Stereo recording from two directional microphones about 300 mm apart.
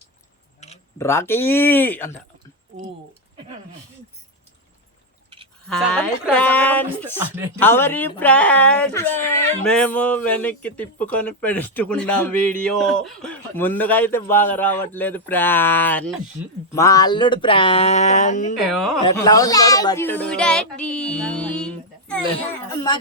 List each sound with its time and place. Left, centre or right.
0.9 s speech: centre
5.6 s speech: centre; by 18.5 s left
18.5 s speech: centre
19.0 s speech: centre